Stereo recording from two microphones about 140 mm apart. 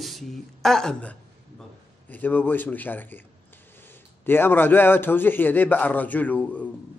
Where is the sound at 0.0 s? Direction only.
Centre (ahead or behind).